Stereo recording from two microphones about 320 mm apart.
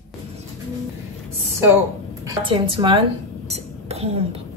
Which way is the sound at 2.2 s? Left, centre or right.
Centre.